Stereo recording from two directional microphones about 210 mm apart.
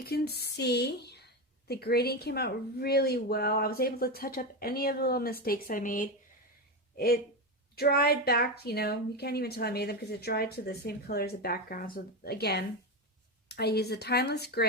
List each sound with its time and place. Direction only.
0.0 s a woman's voice: 50° left (ahead or behind)